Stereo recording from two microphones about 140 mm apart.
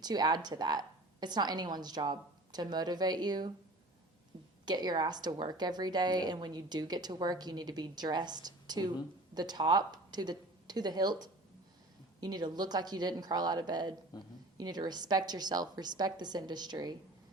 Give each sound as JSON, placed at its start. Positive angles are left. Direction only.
{"t": 0.0, "sound": "a woman's voice", "side_deg": -30}
{"t": 4.6, "sound": "a woman's voice", "side_deg": -30}
{"t": 14.1, "sound": "speech", "side_deg": 30}
{"t": 14.6, "sound": "a woman's voice", "side_deg": -30}